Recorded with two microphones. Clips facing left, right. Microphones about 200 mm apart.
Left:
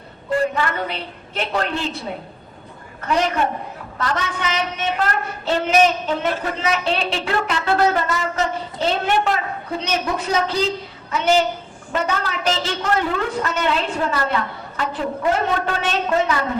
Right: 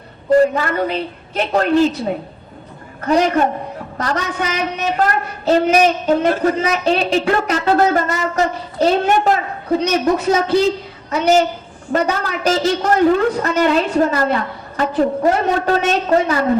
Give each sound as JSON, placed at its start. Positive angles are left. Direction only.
{"t": 0.3, "sound": "a woman's voice", "side_deg": -40}
{"t": 3.1, "sound": "speech", "side_deg": -40}
{"t": 11.1, "sound": "a woman's voice", "side_deg": -40}